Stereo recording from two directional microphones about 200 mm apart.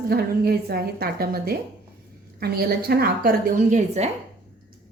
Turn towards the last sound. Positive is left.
turn(degrees=-35)  # may be behind; listen again after turning